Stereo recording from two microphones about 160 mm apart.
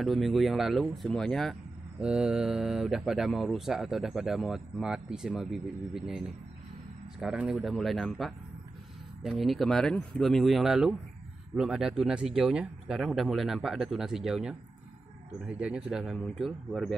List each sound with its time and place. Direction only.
0.0 s speech: centre (ahead or behind)